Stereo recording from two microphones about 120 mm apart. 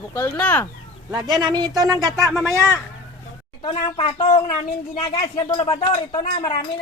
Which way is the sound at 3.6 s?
50° left (ahead or behind).